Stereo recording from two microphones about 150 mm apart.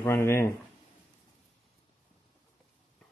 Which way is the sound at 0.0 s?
15° left (ahead or behind).